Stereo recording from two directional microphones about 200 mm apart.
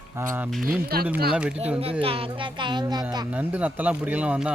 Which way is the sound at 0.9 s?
50° right (ahead or behind).